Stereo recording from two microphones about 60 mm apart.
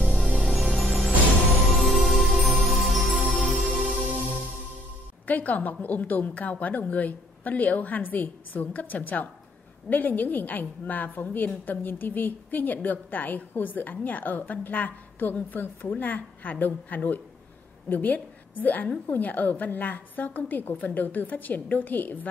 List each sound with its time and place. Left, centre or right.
0.4 s music: centre
5.2 s a woman's voice: left